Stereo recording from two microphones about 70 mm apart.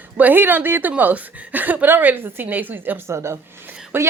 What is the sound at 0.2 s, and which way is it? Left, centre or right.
Speech, right.